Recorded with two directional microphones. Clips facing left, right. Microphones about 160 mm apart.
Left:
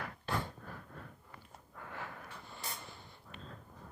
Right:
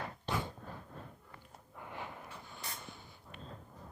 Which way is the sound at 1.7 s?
20° right (ahead or behind).